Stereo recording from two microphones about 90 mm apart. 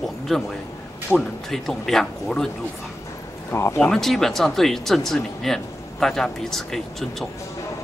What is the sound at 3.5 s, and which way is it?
Speech, 30° left (ahead or behind).